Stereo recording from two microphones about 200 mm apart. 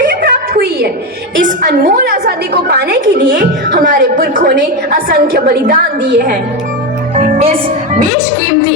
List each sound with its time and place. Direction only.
0.0 s a sound: 45° right (ahead or behind)
1.5 s a woman's voice: 45° right (ahead or behind)
7.2 s a woman's voice: 30° right (ahead or behind)